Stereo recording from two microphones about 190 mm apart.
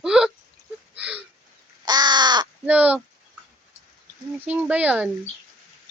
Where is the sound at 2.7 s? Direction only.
5° right (ahead or behind).